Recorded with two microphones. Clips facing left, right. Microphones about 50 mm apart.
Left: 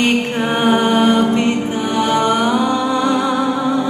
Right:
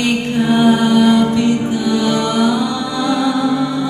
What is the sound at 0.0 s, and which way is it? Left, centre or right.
Music, left.